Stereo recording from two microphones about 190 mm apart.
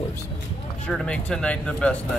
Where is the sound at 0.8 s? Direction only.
5° left (ahead or behind).